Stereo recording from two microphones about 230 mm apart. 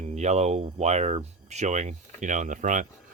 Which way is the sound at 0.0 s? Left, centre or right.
Right.